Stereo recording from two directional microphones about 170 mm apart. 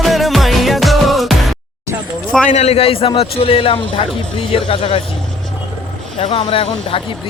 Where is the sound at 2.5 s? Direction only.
40° left (ahead or behind).